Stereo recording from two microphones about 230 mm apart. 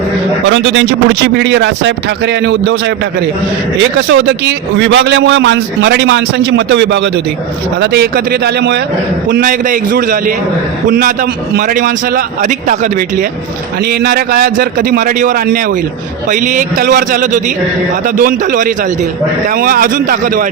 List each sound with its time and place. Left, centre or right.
0.4 s a man's voice: right